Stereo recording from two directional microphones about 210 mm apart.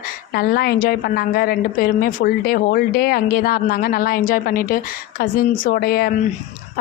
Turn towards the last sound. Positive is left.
turn(degrees=45)  # may be behind; listen again after turning